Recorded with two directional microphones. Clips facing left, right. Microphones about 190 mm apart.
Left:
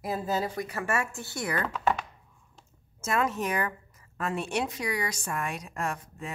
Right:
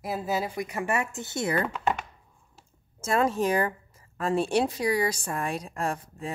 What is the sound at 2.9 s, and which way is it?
Speech, 30° right (ahead or behind).